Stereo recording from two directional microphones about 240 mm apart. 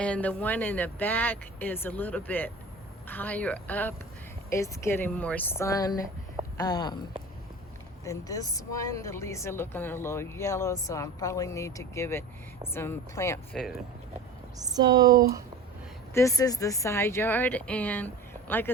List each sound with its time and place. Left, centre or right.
0.0 s a woman's voice: centre
8.0 s a woman's voice: centre
14.6 s speech: centre
16.1 s a woman's voice: centre